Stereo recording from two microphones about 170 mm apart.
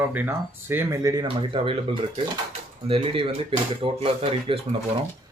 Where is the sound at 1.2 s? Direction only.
30° right (ahead or behind).